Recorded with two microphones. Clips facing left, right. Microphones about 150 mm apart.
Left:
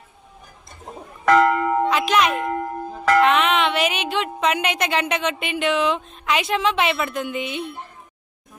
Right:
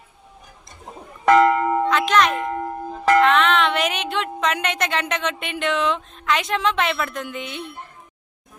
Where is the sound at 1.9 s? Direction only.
10° left (ahead or behind).